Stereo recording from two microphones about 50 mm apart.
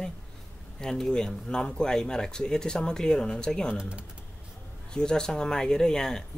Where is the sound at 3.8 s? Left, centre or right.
Right.